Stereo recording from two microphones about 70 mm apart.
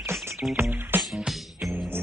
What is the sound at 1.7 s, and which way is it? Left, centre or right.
Music, right.